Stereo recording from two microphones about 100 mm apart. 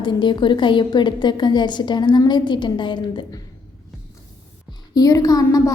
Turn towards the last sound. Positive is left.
turn(degrees=35)  # may be behind; listen again after turning